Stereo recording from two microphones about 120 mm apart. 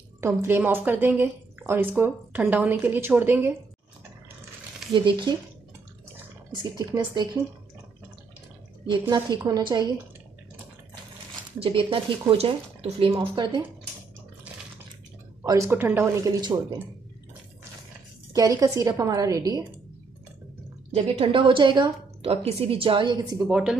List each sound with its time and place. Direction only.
0.2 s speech: 20° right (ahead or behind)
4.9 s a woman's voice: 40° right (ahead or behind)
6.5 s a woman's voice: 35° right (ahead or behind)
9.4 s a woman's voice: 35° right (ahead or behind)
11.6 s speech: 50° right (ahead or behind)
13.2 s a woman's voice: 40° right (ahead or behind)
15.4 s speech: 30° right (ahead or behind)
15.7 s speech: 15° right (ahead or behind)
16.3 s a woman's voice: 35° right (ahead or behind)
18.3 s a woman's voice: 30° right (ahead or behind)
20.9 s speech: 50° right (ahead or behind)
22.2 s speech: 55° right (ahead or behind)
23.5 s speech: 5° right (ahead or behind)